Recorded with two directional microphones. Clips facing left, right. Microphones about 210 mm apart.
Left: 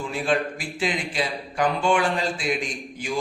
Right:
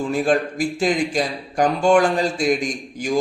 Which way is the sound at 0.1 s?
45° right (ahead or behind).